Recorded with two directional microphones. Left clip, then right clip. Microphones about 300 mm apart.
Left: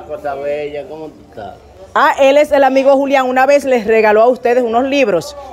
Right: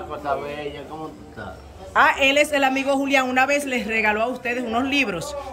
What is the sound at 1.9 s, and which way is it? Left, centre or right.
A woman's voice, centre.